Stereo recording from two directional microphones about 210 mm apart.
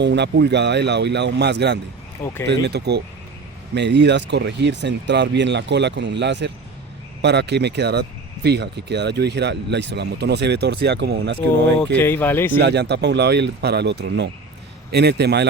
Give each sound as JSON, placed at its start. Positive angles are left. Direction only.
{"t": 0.0, "sound": "speech", "side_deg": -55}
{"t": 2.2, "sound": "speech", "side_deg": 15}
{"t": 2.5, "sound": "speech", "side_deg": -50}
{"t": 11.9, "sound": "speech", "side_deg": 10}
{"t": 12.5, "sound": "speech", "side_deg": -50}